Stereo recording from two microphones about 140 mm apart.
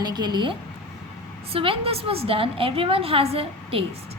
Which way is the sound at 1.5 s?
40° right (ahead or behind).